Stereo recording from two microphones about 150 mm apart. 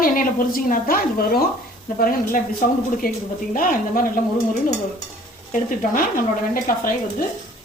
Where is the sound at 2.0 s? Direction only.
70° left (ahead or behind).